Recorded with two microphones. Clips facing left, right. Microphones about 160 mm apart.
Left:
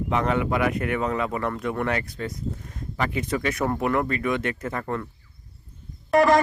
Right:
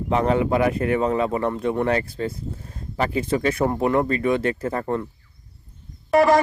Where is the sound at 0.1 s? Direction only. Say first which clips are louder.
Right 5 dB; 30° right (ahead or behind).